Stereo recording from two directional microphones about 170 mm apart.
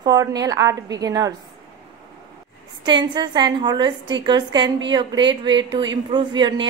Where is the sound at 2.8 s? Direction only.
25° right (ahead or behind).